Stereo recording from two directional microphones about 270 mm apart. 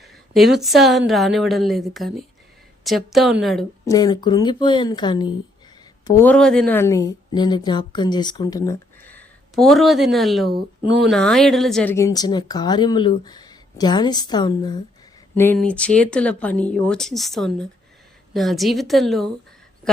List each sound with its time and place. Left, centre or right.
0.0 s speech: centre
3.8 s a woman's voice: centre